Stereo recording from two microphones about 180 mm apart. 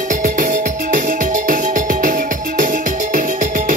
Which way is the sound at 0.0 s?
50° right (ahead or behind).